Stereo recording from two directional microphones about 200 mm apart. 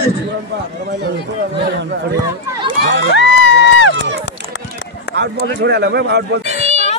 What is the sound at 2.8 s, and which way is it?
Speech, 60° right (ahead or behind).